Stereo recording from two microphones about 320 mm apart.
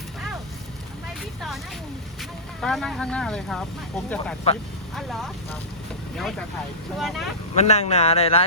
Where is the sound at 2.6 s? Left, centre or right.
Centre.